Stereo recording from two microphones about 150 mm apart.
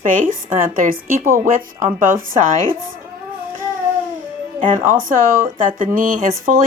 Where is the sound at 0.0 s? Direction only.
60° right (ahead or behind).